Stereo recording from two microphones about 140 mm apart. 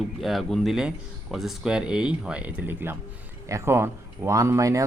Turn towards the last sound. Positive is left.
turn(degrees=-20)  # may be behind; listen again after turning